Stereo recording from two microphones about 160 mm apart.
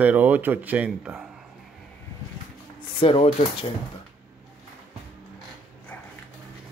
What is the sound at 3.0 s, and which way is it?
Speech, 40° left (ahead or behind).